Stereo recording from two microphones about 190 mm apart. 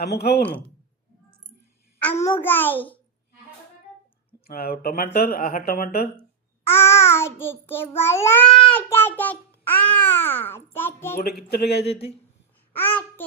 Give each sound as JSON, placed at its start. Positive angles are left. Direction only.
{"t": 0.0, "sound": "speech", "side_deg": 55}
{"t": 2.0, "sound": "a child's voice", "side_deg": 10}
{"t": 4.4, "sound": "speech", "side_deg": 55}
{"t": 6.7, "sound": "a child's voice", "side_deg": 15}
{"t": 11.2, "sound": "speech", "side_deg": 55}
{"t": 11.8, "sound": "speech", "side_deg": 30}
{"t": 12.7, "sound": "babbling", "side_deg": 10}